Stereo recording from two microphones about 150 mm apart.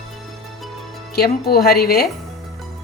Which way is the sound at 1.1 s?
90° left.